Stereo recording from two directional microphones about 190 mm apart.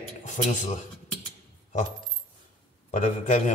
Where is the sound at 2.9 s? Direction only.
40° left (ahead or behind).